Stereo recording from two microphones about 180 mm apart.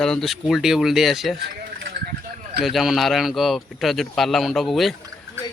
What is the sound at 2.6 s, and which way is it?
Speech, centre (ahead or behind).